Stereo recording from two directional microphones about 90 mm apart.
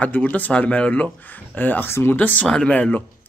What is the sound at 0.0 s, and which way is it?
Speech, 15° left (ahead or behind).